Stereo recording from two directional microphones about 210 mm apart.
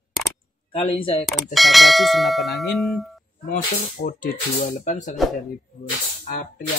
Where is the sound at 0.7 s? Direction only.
30° left (ahead or behind).